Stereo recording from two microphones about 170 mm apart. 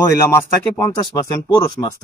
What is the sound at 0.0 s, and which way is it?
Speech, 20° left (ahead or behind).